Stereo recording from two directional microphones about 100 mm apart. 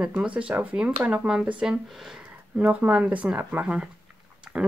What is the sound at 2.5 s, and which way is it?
Speech, 10° right (ahead or behind).